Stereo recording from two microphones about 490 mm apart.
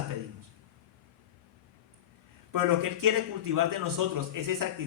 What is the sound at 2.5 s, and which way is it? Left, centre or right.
A man's voice, right.